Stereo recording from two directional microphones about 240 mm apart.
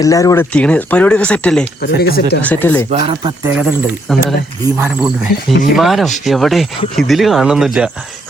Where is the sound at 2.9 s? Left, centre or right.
Right.